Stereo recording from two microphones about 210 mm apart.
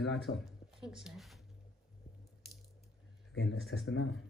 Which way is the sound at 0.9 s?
Centre (ahead or behind).